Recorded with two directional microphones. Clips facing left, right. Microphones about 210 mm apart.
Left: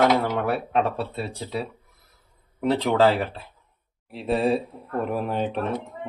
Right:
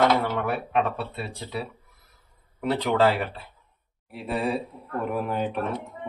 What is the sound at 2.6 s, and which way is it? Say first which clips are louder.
Speech: left 2 dB; 30° left (ahead or behind).